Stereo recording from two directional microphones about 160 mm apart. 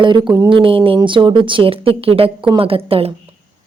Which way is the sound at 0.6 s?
35° right (ahead or behind).